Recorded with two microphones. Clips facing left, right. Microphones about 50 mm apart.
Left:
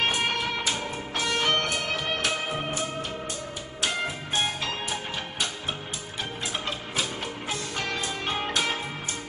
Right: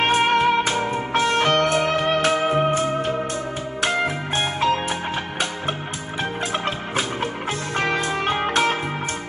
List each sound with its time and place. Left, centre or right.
0.0 s music: right
6.5 s music: right